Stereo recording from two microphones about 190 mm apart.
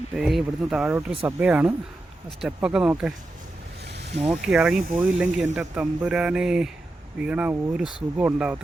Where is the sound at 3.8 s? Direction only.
60° right (ahead or behind).